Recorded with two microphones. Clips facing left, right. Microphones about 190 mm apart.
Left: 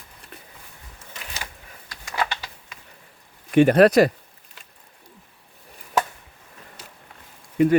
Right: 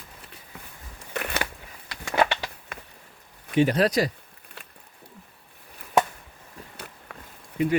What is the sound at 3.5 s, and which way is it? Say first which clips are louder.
Speech: left 7 dB; 55° left (ahead or behind).